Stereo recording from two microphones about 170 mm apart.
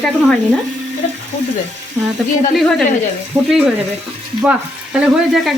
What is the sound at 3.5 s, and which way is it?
Speech, 5° right (ahead or behind).